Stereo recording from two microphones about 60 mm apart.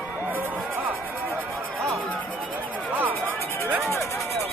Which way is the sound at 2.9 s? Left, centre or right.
Right.